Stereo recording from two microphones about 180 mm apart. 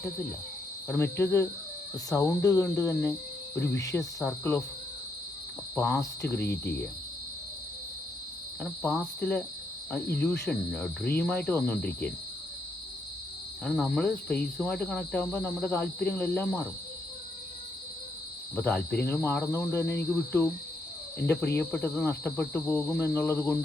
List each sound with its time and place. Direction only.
0.9 s speech: 15° left (ahead or behind)
3.8 s cricket: 20° left (ahead or behind)
4.2 s speech: 10° left (ahead or behind)
5.7 s speech: 15° left (ahead or behind)
8.8 s speech: 10° left (ahead or behind)
10.5 s cricket: 5° left (ahead or behind)
11.2 s speech: 5° left (ahead or behind)
13.7 s speech: 5° left (ahead or behind)
18.5 s speech: 10° left (ahead or behind)